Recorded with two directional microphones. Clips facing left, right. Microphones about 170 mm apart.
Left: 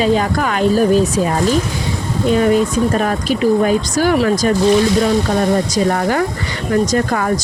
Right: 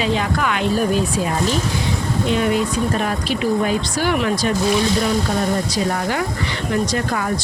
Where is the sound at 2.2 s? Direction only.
40° left (ahead or behind).